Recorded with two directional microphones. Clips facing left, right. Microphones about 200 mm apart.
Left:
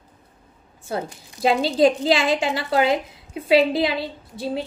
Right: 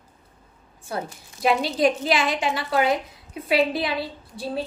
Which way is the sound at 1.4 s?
25° left (ahead or behind).